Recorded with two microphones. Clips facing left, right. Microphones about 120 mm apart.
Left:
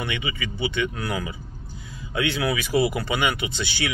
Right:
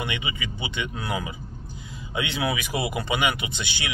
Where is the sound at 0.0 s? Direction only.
20° right (ahead or behind).